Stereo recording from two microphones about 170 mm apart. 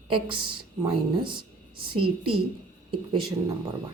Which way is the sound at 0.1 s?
30° right (ahead or behind).